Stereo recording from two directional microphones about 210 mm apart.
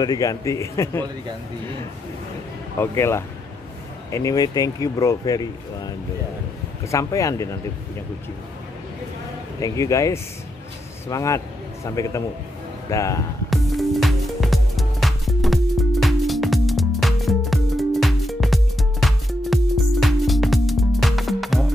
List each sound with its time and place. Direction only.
0.0 s speech: 15° left (ahead or behind)
2.8 s speech: 10° left (ahead or behind)
9.6 s speech: 15° left (ahead or behind)
13.5 s music: centre (ahead or behind)